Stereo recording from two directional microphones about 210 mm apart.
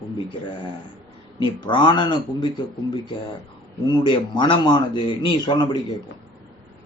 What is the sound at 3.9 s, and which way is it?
Speech, 20° left (ahead or behind).